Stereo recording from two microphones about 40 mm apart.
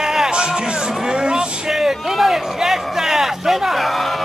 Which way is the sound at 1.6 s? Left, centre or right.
Centre.